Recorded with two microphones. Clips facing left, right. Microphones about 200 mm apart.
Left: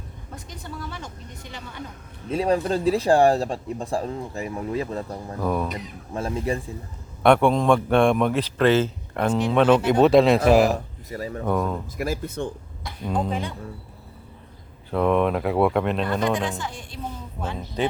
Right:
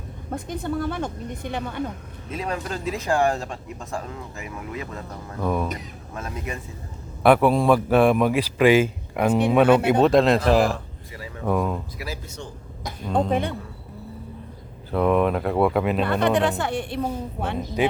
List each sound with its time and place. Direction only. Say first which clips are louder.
0.3 s a woman's voice: right 11 dB; 55° right (ahead or behind)
2.3 s speech: left 7 dB; 30° left (ahead or behind)
5.4 s speech: even; centre (ahead or behind)
6.1 s speech: left 7 dB; 30° left (ahead or behind)
7.2 s a man's voice: right 1 dB; 5° right (ahead or behind)
10.7 s speech: left 4 dB; 40° left (ahead or behind)
11.4 s speech: right 2 dB; 5° right (ahead or behind)
11.9 s speech: left 7 dB; 50° left (ahead or behind)
14.8 s speech: right 1 dB; centre (ahead or behind)
16.2 s a woman's voice: right 4 dB; 65° right (ahead or behind)
17.8 s a man's voice: right 2 dB; 10° right (ahead or behind)